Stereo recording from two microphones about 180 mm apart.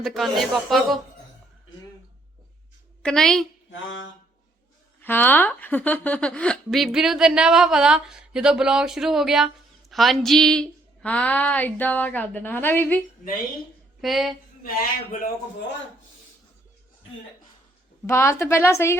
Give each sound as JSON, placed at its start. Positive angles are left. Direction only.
{"t": 0.0, "sound": "a woman's voice", "side_deg": 0}
{"t": 3.0, "sound": "a woman's voice", "side_deg": 5}
{"t": 3.7, "sound": "a sound", "side_deg": 90}
{"t": 5.0, "sound": "a woman's voice", "side_deg": 10}
{"t": 14.0, "sound": "a woman's voice", "side_deg": 0}
{"t": 18.0, "sound": "a woman's voice", "side_deg": 15}